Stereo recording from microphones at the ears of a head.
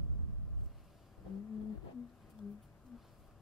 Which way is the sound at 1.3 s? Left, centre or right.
Left.